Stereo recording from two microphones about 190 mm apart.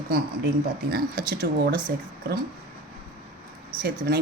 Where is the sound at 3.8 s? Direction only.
50° right (ahead or behind).